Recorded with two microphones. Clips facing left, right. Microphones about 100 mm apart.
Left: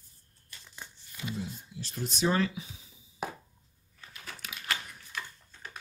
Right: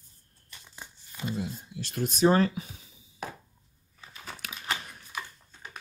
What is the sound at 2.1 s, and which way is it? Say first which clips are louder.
Speech: right 6 dB; 40° right (ahead or behind).